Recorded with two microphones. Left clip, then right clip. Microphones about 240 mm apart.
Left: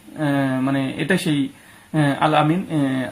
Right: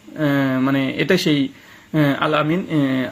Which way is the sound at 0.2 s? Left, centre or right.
Centre.